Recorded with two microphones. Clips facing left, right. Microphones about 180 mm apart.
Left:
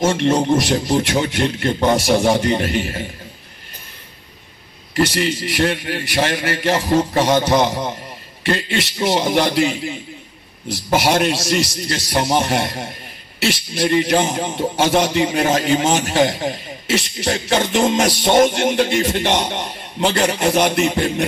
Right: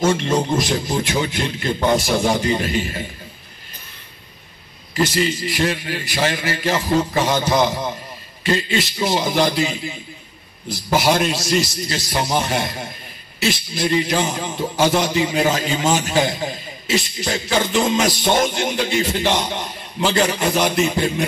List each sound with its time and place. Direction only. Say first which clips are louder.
0.2 s a man's voice: left 4 dB; 65° left (ahead or behind)
4.9 s a man's voice: left 1 dB; 65° left (ahead or behind)
11.0 s a man's voice: left 1 dB; 65° left (ahead or behind)